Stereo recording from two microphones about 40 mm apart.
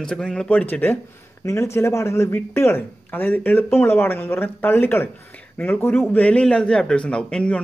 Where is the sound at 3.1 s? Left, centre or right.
Left.